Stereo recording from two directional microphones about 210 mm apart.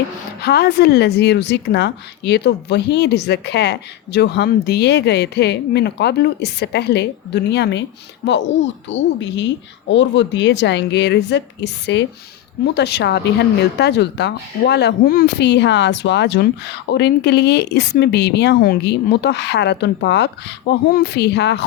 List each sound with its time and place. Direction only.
0.4 s a woman's voice: 50° left (ahead or behind)
8.9 s a woman's voice: 60° left (ahead or behind)